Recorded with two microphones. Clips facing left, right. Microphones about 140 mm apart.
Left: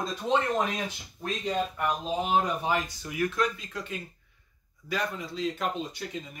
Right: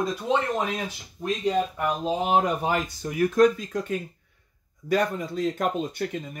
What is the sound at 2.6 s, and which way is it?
Speech, 45° right (ahead or behind).